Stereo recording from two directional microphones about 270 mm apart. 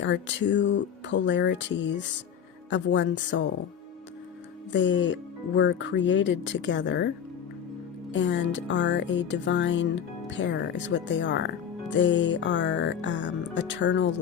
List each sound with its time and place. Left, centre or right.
0.0 s speech: left
4.7 s speech: left
8.1 s speech: left